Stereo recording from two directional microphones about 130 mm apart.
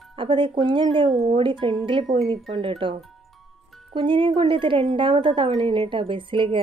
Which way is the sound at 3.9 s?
40° right (ahead or behind).